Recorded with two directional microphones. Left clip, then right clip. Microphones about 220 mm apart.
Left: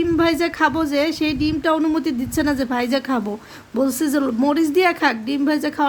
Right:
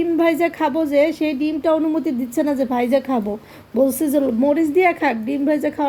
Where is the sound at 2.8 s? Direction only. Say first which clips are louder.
Right 3 dB; 45° left (ahead or behind).